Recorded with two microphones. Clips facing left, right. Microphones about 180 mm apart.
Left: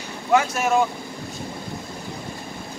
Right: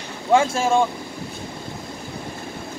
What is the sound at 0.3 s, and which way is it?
Speech, 30° right (ahead or behind).